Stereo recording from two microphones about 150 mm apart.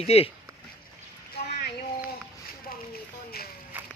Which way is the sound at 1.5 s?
90° left.